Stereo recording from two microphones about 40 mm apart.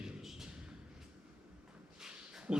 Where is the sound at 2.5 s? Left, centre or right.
Right.